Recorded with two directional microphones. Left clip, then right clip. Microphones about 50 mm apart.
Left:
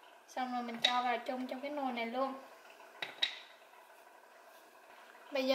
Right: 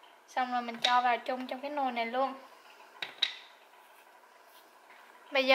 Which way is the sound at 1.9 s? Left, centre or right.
Left.